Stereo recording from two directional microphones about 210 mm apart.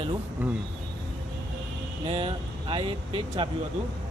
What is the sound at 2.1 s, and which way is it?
Speech, 25° right (ahead or behind).